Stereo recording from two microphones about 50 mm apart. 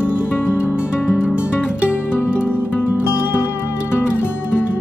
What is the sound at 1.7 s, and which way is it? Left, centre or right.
Music, right.